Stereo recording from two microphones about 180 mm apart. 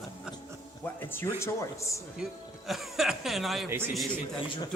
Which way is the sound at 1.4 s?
15° left (ahead or behind).